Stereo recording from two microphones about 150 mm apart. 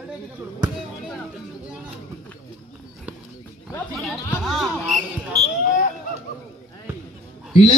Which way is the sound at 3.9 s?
Centre (ahead or behind).